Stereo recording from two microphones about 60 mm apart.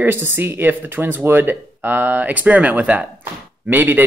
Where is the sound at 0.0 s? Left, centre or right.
Right.